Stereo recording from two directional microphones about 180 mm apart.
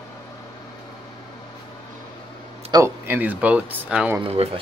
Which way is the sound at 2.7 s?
15° right (ahead or behind).